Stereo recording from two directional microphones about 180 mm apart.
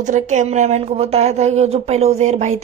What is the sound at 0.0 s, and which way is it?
Speech, 40° right (ahead or behind).